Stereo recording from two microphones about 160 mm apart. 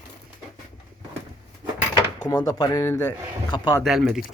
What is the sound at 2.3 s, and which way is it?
Speech, 20° left (ahead or behind).